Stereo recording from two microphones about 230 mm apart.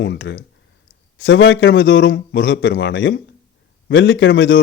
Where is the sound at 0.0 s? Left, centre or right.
Left.